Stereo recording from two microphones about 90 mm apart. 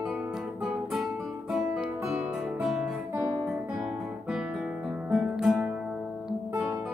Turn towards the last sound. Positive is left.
turn(degrees=-5)  # may be behind; listen again after turning